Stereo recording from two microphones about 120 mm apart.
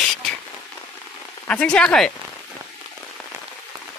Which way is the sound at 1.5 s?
10° left (ahead or behind).